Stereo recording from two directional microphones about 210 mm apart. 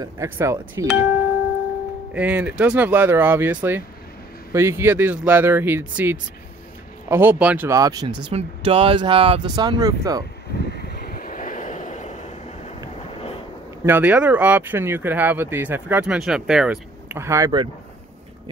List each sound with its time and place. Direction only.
0.0 s speech: 15° right (ahead or behind)
2.1 s speech: 10° right (ahead or behind)
8.2 s speech: 25° right (ahead or behind)
10.6 s vehicle: 50° left (ahead or behind); by 12.3 s 35° left (ahead or behind)
13.8 s speech: 10° right (ahead or behind)